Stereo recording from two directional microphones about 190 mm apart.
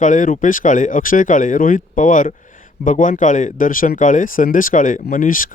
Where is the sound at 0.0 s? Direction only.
40° left (ahead or behind).